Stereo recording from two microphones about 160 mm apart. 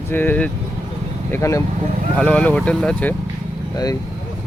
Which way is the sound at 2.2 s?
5° left (ahead or behind).